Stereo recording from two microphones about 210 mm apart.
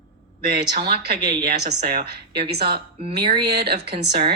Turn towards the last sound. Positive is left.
turn(degrees=-50)  # may be behind; listen again after turning